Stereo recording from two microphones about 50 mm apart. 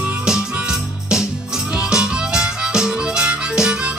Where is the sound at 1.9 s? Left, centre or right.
Centre.